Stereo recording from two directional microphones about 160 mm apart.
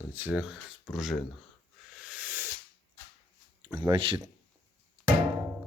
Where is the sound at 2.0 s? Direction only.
10° right (ahead or behind).